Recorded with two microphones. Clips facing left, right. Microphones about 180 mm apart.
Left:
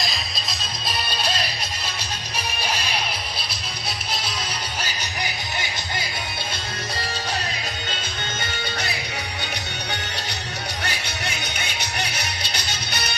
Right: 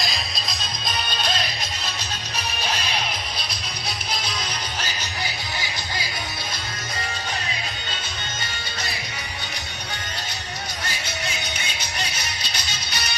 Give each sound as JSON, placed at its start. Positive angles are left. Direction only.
{"t": 0.9, "sound": "music", "side_deg": 10}
{"t": 2.6, "sound": "music", "side_deg": 10}
{"t": 4.8, "sound": "music", "side_deg": 20}
{"t": 10.8, "sound": "music", "side_deg": 65}